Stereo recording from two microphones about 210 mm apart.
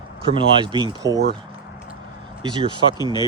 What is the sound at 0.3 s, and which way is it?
Speech, 25° right (ahead or behind).